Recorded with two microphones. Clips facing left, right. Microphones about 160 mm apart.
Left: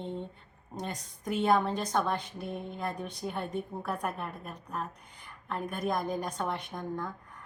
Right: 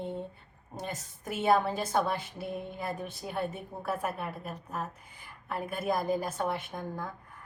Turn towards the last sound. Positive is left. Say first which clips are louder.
# left 1 dB
turn(degrees=-5)  # may be behind; listen again after turning